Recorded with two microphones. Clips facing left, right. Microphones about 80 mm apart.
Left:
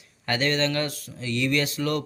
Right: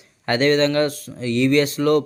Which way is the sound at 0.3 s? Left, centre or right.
Right.